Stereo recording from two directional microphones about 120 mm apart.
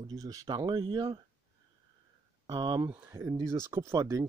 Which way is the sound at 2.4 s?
35° right (ahead or behind).